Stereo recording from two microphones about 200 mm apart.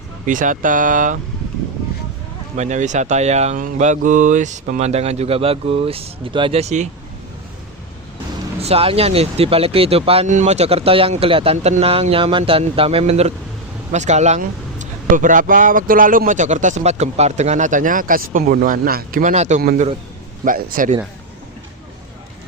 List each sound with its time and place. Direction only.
0.3 s speech: 40° right (ahead or behind)
2.6 s speech: 35° right (ahead or behind)
8.6 s speech: 30° right (ahead or behind)